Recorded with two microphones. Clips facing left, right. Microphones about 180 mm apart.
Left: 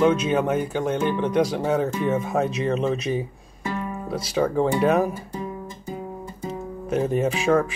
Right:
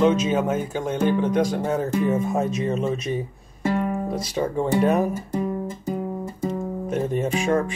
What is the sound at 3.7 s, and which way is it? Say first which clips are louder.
Music: right 6 dB; 60° right (ahead or behind).